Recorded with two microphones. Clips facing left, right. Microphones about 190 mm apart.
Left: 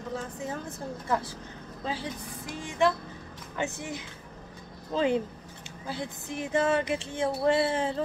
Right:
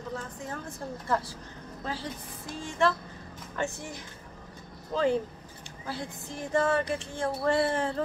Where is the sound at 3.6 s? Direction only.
20° left (ahead or behind).